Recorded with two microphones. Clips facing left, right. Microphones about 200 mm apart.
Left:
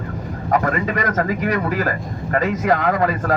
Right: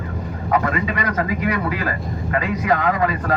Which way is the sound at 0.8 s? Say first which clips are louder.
Left 2 dB; 45° left (ahead or behind).